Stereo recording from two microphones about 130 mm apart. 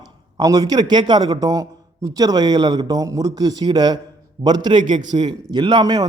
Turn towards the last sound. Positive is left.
turn(degrees=-30)  # may be behind; listen again after turning